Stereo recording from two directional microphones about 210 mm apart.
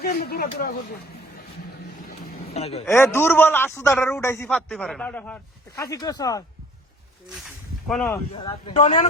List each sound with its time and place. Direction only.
0.0 s speech: 45° left (ahead or behind)
2.5 s speech: 30° left (ahead or behind)
2.8 s a man's voice: 10° left (ahead or behind)
4.4 s a man's voice: centre (ahead or behind)
7.9 s speech: 5° left (ahead or behind)
8.3 s speech: 25° left (ahead or behind)